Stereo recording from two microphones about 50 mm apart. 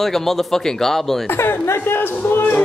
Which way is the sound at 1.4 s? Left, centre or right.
Left.